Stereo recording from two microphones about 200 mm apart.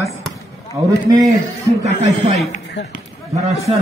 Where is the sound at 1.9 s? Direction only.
35° right (ahead or behind).